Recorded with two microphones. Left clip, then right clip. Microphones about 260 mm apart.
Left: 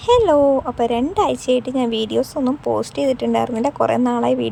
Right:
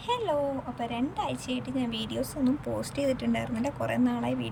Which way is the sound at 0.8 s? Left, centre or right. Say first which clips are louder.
Left 14 dB; centre.